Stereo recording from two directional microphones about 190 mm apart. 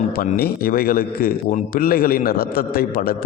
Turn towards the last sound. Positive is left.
turn(degrees=50)  # may be behind; listen again after turning